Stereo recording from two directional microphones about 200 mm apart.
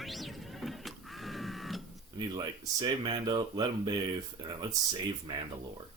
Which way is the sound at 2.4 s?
20° right (ahead or behind).